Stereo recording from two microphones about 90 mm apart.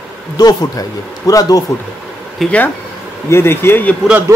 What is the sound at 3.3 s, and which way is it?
Speech, 25° left (ahead or behind).